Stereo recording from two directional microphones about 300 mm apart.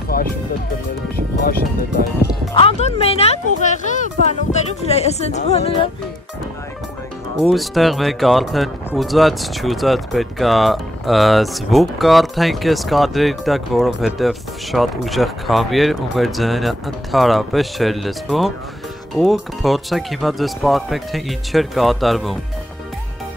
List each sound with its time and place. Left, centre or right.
0.1 s music: left
1.1 s speech: left
2.5 s speech: centre
7.5 s speech: centre